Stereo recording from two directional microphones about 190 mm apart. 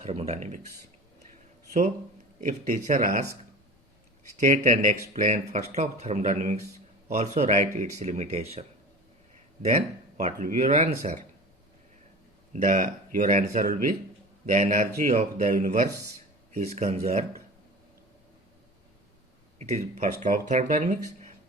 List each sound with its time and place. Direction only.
0.0 s speech: 35° right (ahead or behind)
2.4 s speech: 40° right (ahead or behind)
4.4 s speech: 40° right (ahead or behind)
9.6 s speech: 35° right (ahead or behind)
12.5 s speech: 45° right (ahead or behind)
19.5 s speech: 35° right (ahead or behind)